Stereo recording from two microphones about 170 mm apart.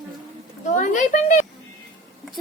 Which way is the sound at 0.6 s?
45° left (ahead or behind).